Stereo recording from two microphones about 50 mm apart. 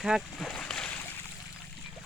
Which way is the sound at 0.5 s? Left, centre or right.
Centre.